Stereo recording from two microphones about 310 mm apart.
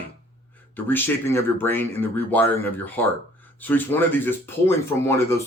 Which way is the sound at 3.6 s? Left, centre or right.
Centre.